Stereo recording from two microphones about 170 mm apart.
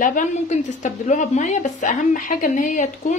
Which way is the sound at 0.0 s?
50° left (ahead or behind).